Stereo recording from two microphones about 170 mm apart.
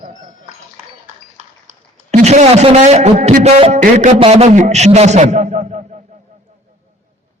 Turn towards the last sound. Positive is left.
turn(degrees=-45)  # may be behind; listen again after turning